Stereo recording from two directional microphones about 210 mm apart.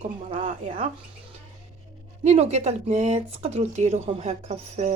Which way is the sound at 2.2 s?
30° right (ahead or behind).